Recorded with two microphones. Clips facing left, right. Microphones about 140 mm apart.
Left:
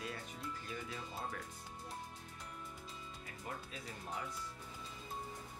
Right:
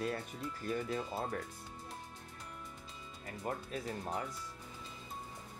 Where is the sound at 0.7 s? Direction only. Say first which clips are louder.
Right 9 dB; 50° right (ahead or behind).